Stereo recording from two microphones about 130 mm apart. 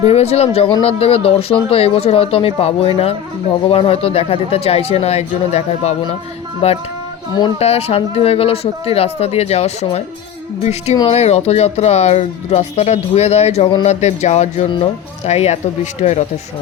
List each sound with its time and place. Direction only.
0.0 s speech: 55° left (ahead or behind)